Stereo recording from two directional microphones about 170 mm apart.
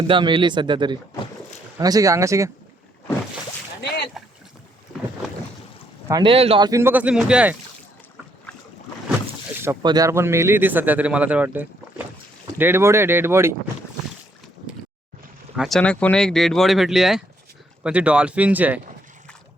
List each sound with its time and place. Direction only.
0.1 s speech: 30° right (ahead or behind)
3.8 s boat: 80° left
6.1 s speech: 25° right (ahead or behind)
6.7 s speech: 15° right (ahead or behind)
9.8 s speech: 20° right (ahead or behind)
15.5 s speech: centre (ahead or behind)